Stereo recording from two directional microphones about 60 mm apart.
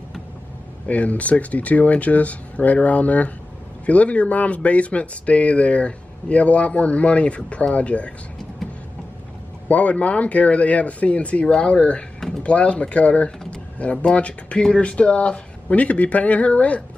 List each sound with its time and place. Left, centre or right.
0.8 s speech: left
9.7 s speech: left